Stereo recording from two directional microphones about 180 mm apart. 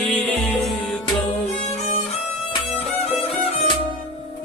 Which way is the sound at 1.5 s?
35° left (ahead or behind).